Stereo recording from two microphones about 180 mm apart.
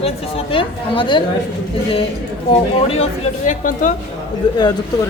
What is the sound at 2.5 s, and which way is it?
A man's voice, 30° left (ahead or behind).